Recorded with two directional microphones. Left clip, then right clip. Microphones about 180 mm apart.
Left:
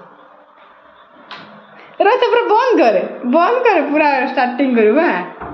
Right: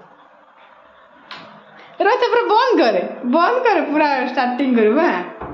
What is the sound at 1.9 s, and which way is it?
A woman's voice, 5° left (ahead or behind).